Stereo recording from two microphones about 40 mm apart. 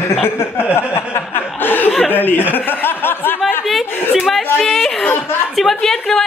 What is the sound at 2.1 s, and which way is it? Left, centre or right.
Speech, left.